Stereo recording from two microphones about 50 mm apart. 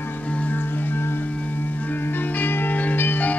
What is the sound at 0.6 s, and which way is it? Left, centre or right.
Music, left.